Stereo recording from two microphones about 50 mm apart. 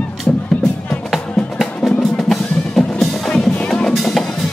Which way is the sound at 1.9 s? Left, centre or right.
Centre.